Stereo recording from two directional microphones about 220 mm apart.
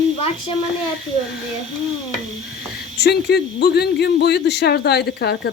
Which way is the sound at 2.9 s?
50° left (ahead or behind).